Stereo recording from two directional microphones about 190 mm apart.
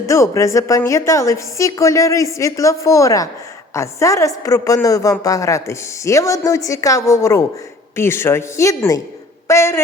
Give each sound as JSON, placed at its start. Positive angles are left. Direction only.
{"t": 0.0, "sound": "a woman's voice", "side_deg": 15}